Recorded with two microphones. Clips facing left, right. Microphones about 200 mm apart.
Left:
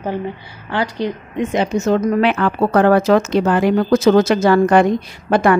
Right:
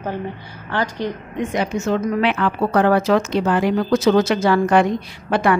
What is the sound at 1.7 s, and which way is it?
A woman's voice, 40° left (ahead or behind).